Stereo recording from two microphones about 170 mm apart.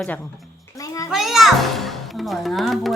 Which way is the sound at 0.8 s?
20° left (ahead or behind).